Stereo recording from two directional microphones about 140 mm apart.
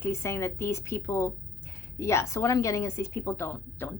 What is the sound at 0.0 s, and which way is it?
A woman's voice, 20° left (ahead or behind).